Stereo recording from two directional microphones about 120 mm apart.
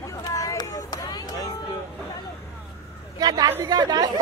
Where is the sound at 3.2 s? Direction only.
35° right (ahead or behind).